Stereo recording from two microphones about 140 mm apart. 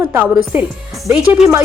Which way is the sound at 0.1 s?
10° right (ahead or behind).